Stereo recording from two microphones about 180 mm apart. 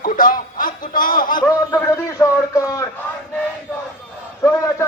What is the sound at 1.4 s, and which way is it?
A man's voice, 15° left (ahead or behind).